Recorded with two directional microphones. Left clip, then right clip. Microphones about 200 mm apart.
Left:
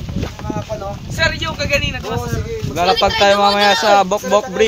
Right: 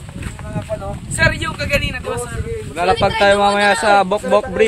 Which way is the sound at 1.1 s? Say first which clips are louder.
Right 1 dB; 60° right (ahead or behind).